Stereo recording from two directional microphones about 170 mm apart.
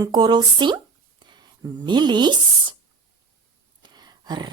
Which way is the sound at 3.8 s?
25° right (ahead or behind).